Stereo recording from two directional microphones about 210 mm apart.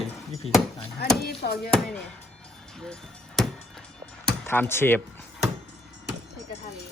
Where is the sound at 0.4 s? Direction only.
30° left (ahead or behind).